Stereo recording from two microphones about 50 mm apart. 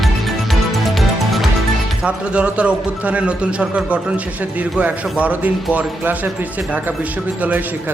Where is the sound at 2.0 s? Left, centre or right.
Right.